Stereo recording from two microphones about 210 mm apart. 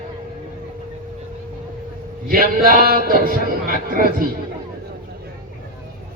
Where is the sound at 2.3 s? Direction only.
45° right (ahead or behind).